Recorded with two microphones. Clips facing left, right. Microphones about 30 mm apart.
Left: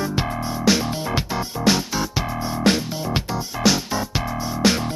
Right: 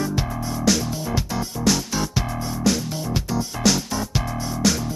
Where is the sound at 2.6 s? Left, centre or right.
Left.